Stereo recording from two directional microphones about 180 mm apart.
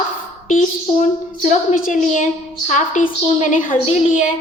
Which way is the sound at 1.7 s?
50° left (ahead or behind).